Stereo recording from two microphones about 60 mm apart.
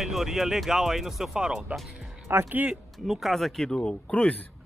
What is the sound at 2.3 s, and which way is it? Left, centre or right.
Speech, right.